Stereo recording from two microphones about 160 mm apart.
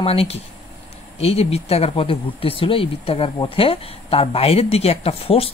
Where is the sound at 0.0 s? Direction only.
40° left (ahead or behind).